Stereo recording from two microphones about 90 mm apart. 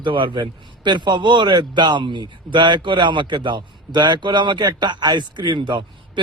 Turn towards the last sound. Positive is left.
turn(degrees=-60)  # may be behind; listen again after turning